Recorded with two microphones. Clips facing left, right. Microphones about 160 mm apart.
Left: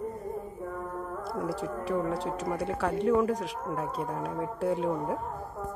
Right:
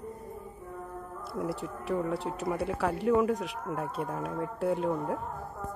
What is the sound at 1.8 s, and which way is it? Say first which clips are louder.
Speech: even; centre (ahead or behind).